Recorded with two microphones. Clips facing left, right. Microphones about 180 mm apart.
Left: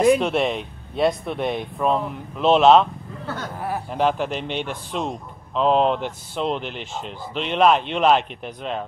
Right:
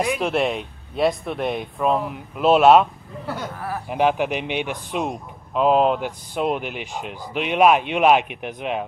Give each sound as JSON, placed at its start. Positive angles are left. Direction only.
{"t": 0.2, "sound": "speech", "side_deg": 0}
{"t": 3.5, "sound": "a sound", "side_deg": 25}
{"t": 3.9, "sound": "speech", "side_deg": -10}